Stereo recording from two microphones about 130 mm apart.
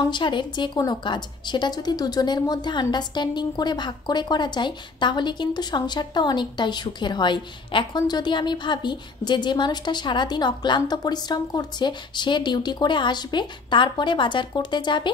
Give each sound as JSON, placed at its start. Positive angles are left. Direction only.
{"t": 0.1, "sound": "a woman's voice", "side_deg": 35}